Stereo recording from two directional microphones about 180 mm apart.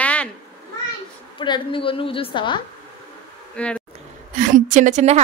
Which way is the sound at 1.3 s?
25° left (ahead or behind).